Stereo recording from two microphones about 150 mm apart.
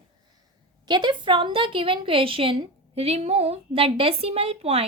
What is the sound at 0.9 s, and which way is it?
A woman's voice, 30° right (ahead or behind).